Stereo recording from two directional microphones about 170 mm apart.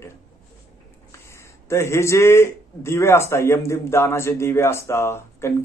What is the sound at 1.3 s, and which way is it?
A man's voice, 15° left (ahead or behind).